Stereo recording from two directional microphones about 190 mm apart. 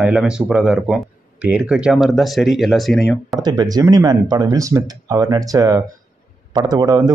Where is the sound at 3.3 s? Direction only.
20° right (ahead or behind).